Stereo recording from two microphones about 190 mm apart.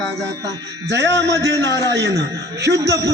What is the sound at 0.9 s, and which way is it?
Music, 65° right (ahead or behind).